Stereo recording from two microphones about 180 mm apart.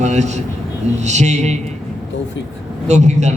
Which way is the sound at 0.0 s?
40° right (ahead or behind).